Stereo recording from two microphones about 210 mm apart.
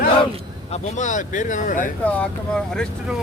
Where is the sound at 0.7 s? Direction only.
35° left (ahead or behind).